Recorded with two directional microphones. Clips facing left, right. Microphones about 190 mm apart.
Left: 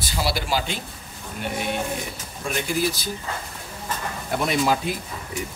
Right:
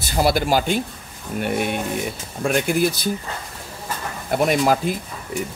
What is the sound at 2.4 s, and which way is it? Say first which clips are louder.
Speech: right 8 dB; 55° right (ahead or behind).